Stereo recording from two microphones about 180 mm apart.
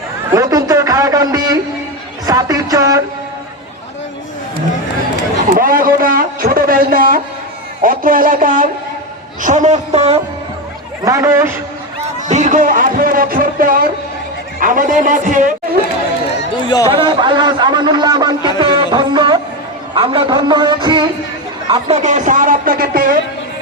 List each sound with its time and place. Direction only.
0.3 s a sound: 20° right (ahead or behind)
2.2 s music: 20° right (ahead or behind)
5.5 s a sound: 50° right (ahead or behind)
7.8 s a woman's voice: 50° right (ahead or behind)
11.0 s a man's voice: 15° right (ahead or behind)
12.3 s speech: 40° right (ahead or behind)
16.6 s speech: 20° left (ahead or behind)
16.9 s a man's voice: 25° right (ahead or behind)
18.6 s music: 25° right (ahead or behind)
19.9 s a man's voice: 30° right (ahead or behind)
21.8 s speech: 40° right (ahead or behind)